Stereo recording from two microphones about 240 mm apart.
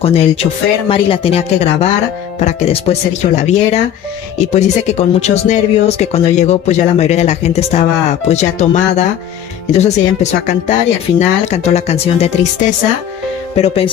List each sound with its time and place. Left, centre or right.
0.0 s speech: left